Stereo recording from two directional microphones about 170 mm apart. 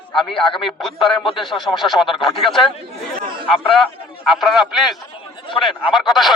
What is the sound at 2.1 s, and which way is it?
Speech, 30° left (ahead or behind).